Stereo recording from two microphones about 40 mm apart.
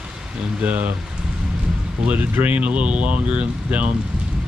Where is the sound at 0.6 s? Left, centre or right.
Right.